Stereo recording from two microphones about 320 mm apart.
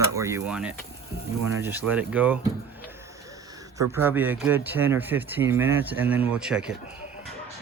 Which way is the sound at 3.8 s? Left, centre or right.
Centre.